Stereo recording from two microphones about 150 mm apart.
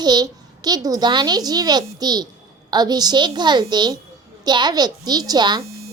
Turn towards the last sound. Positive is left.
turn(degrees=-25)  # may be behind; listen again after turning